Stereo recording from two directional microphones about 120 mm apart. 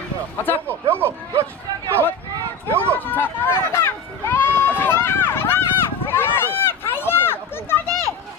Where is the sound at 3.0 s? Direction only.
15° left (ahead or behind).